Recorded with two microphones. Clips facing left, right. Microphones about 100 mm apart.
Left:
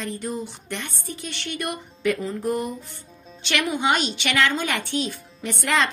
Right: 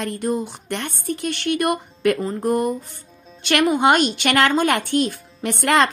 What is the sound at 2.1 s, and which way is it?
Speech, 40° right (ahead or behind).